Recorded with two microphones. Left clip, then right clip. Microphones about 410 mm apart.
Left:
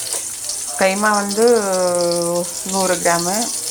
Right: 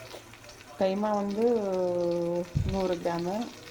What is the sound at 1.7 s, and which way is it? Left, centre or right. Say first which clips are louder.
Speech: left 11 dB; right.